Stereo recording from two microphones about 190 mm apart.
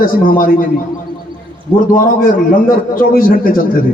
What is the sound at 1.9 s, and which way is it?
A man's voice, 45° left (ahead or behind).